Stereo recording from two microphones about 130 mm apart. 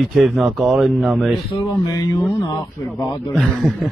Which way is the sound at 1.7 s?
25° left (ahead or behind).